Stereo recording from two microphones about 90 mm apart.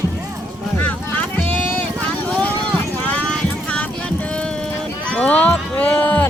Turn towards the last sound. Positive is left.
turn(degrees=20)  # may be behind; listen again after turning